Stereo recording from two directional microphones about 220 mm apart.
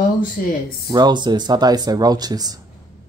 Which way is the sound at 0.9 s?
20° right (ahead or behind).